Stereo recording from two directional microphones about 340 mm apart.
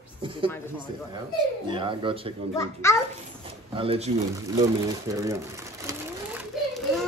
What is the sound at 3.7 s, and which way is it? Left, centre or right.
Speech, centre.